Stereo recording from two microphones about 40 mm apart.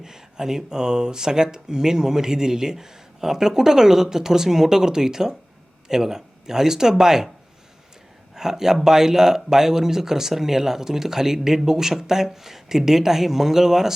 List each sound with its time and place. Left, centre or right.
0.0 s speech: centre
8.4 s speech: centre